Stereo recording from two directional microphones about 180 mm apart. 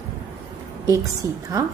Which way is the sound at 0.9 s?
20° right (ahead or behind).